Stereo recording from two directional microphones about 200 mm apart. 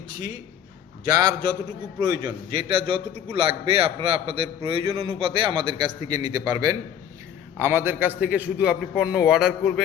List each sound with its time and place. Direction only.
1.0 s a man's voice: 20° right (ahead or behind); by 9.8 s centre (ahead or behind)